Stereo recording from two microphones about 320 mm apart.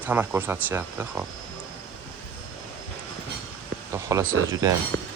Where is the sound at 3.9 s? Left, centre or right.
Centre.